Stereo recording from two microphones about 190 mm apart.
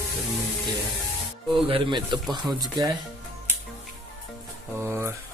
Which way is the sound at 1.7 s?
25° right (ahead or behind).